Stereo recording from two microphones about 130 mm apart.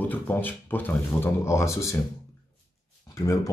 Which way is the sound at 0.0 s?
15° left (ahead or behind).